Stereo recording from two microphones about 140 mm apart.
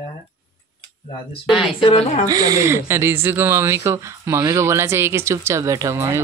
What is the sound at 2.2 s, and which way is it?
Speech, 25° right (ahead or behind).